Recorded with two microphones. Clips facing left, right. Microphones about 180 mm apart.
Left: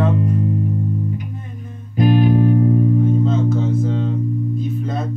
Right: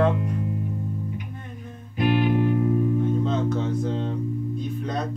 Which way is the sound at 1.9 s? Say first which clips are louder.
Left 6 dB; 40° left (ahead or behind).